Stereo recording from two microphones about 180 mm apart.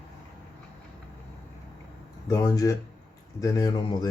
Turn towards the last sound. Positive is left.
turn(degrees=20)  # may be behind; listen again after turning